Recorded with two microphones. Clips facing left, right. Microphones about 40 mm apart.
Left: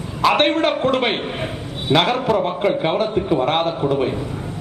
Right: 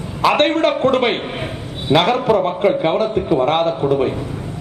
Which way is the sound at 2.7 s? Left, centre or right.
Centre.